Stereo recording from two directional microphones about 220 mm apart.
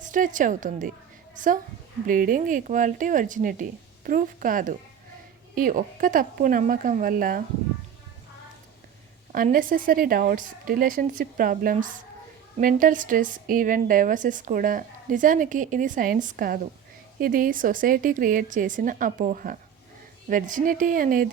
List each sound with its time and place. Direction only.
0.0 s a woman's voice: 35° right (ahead or behind)
2.0 s a woman's voice: 40° right (ahead or behind)
9.3 s a woman's voice: 40° right (ahead or behind)